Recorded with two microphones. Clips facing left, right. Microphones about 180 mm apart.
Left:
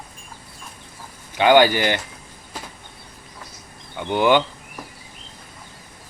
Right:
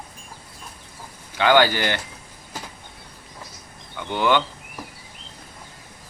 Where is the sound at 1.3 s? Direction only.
15° left (ahead or behind).